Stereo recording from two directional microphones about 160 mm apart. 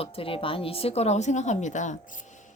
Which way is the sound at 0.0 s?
35° left (ahead or behind).